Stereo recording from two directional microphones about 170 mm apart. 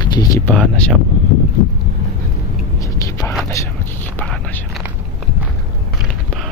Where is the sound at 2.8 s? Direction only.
20° left (ahead or behind).